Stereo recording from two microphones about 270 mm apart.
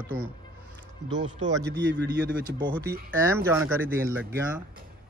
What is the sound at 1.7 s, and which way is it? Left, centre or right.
Speech, right.